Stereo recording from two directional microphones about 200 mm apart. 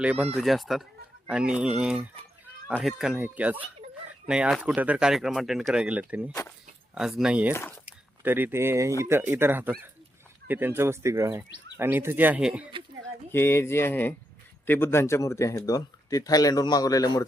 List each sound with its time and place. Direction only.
0.0 s speech: 5° right (ahead or behind)
13.3 s speech: 10° left (ahead or behind)